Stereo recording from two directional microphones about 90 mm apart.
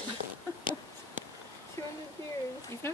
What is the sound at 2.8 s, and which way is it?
Speech, 25° left (ahead or behind).